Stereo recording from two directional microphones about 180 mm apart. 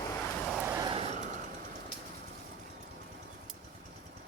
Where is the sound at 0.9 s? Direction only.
30° right (ahead or behind).